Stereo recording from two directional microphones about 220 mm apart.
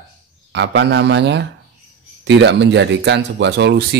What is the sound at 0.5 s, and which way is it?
A man's voice, 50° right (ahead or behind).